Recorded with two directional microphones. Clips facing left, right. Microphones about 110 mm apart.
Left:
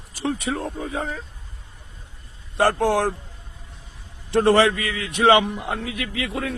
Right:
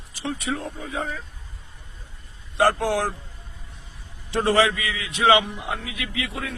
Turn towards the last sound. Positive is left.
turn(degrees=45)  # may be behind; listen again after turning